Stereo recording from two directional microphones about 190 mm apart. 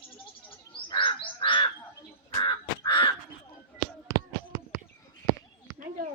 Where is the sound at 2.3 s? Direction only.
25° left (ahead or behind).